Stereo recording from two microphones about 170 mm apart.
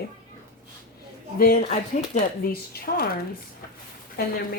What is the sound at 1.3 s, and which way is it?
Speech, 55° left (ahead or behind).